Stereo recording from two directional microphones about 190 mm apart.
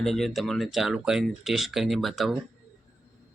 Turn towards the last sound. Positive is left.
turn(degrees=0)  # may be behind; listen again after turning